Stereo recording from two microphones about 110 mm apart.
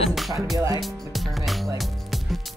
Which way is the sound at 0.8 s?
Centre (ahead or behind).